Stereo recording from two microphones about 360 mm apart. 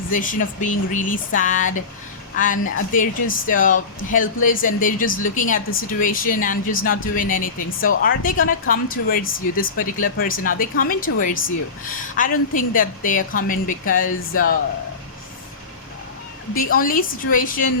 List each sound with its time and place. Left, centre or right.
0.1 s a woman's voice: left
16.6 s speech: left